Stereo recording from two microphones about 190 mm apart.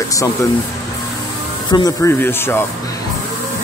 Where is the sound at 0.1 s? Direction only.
15° left (ahead or behind).